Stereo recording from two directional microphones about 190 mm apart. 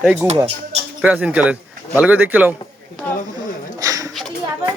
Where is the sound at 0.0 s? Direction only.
5° right (ahead or behind).